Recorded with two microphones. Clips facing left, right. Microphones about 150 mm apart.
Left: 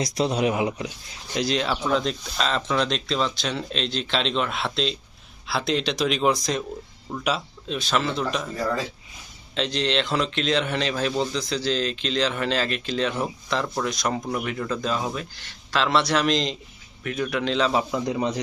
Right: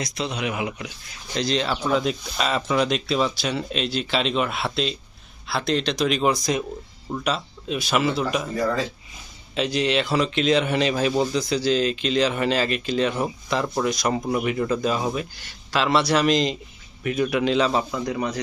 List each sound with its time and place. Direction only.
0.0 s speech: 40° left (ahead or behind)
1.3 s speech: 5° left (ahead or behind)
7.8 s speech: 10° right (ahead or behind)
17.9 s speech: 20° left (ahead or behind)